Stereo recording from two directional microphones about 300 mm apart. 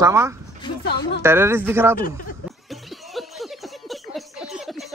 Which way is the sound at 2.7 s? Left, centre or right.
Centre.